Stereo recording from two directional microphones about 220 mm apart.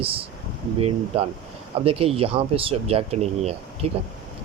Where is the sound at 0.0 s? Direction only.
25° right (ahead or behind).